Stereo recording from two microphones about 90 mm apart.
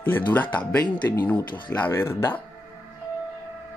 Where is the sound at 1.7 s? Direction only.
25° left (ahead or behind).